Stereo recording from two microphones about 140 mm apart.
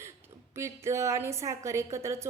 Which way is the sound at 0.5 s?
20° right (ahead or behind).